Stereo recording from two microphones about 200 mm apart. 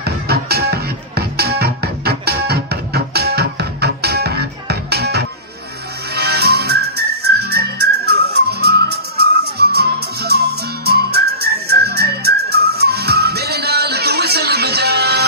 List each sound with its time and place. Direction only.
0.0 s music: 50° right (ahead or behind)
6.1 s whistling: 55° right (ahead or behind)